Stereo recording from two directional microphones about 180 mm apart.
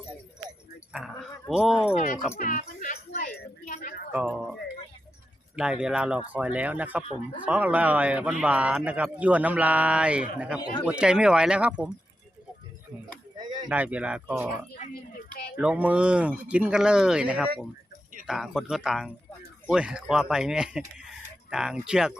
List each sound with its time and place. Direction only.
0.9 s speech: centre (ahead or behind)
2.4 s speech: 45° left (ahead or behind)
3.1 s a sound: 55° left (ahead or behind)
4.1 s a man's voice: 10° right (ahead or behind)
5.5 s a man's voice: 5° right (ahead or behind)
7.0 s speech: 35° left (ahead or behind)
7.4 s a man's voice: 10° right (ahead or behind)
13.7 s a man's voice: 10° right (ahead or behind)
15.3 s a sound: 60° left (ahead or behind)
15.5 s a man's voice: 5° right (ahead or behind)